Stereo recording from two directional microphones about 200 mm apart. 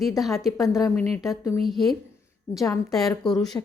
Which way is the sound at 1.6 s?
Centre (ahead or behind).